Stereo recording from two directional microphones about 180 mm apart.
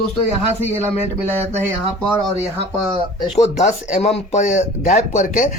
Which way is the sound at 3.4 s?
40° left (ahead or behind).